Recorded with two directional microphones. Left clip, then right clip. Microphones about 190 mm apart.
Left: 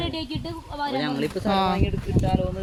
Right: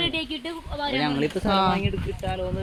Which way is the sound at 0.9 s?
30° right (ahead or behind).